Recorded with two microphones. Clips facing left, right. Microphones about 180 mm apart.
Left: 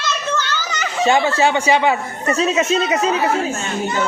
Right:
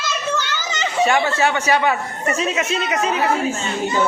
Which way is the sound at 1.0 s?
25° left (ahead or behind).